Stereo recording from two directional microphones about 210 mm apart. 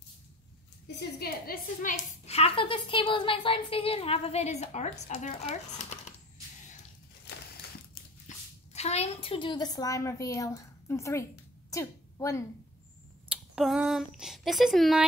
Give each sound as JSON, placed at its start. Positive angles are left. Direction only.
{"t": 0.9, "sound": "a woman's voice", "side_deg": 45}
{"t": 7.9, "sound": "a child's voice", "side_deg": 35}
{"t": 13.3, "sound": "speech", "side_deg": -5}